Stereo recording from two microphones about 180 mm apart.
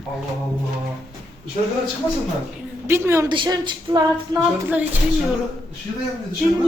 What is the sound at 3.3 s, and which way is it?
Female singing, 25° right (ahead or behind).